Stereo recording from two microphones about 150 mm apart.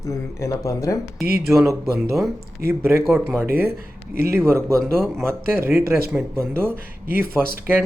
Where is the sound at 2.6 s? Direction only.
15° right (ahead or behind).